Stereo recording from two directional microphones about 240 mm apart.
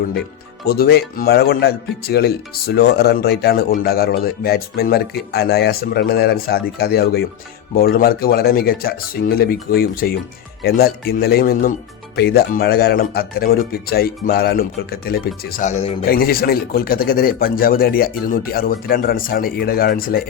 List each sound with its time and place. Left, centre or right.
0.6 s speech: left
16.0 s speech: left